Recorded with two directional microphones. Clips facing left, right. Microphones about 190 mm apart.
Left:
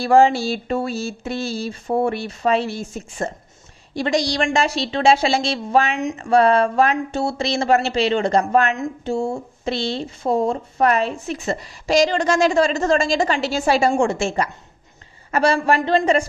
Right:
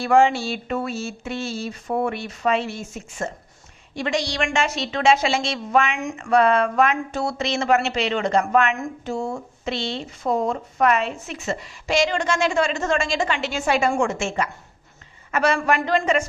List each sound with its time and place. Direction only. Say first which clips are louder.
0.0 s speech: left 3 dB; 35° left (ahead or behind)
8.7 s speech: left 4 dB; 25° left (ahead or behind)